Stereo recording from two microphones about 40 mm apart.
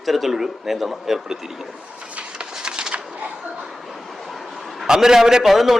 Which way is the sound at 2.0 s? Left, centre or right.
Right.